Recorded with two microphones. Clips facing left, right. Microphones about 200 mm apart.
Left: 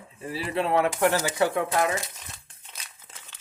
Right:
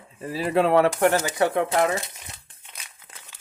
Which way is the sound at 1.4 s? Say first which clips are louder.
Right 3 dB; 25° right (ahead or behind).